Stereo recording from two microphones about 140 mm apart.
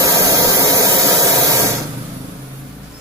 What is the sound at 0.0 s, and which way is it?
Spray, 20° right (ahead or behind).